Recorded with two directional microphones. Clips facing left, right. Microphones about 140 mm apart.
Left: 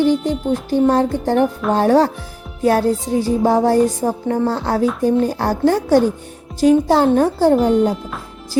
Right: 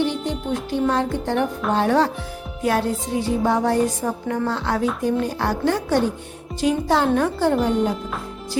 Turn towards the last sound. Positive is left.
turn(degrees=35)  # may be behind; listen again after turning